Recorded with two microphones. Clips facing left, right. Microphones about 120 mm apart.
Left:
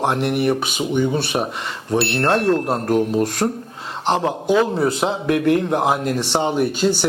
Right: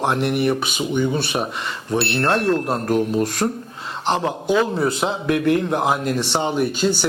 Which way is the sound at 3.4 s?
30° left (ahead or behind).